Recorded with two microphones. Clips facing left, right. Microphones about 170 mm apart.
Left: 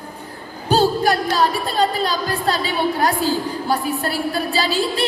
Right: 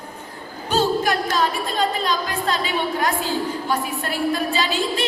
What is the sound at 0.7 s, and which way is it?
Music, 35° left (ahead or behind).